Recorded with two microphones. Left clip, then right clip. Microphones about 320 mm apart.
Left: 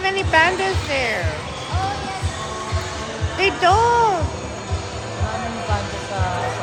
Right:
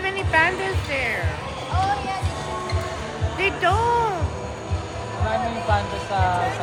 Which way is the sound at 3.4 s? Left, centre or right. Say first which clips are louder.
Left 5 dB; left.